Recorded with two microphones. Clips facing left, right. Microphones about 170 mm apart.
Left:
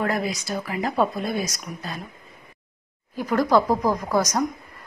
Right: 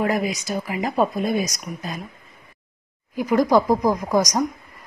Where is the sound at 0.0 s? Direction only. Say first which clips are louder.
Right 3 dB; 15° right (ahead or behind).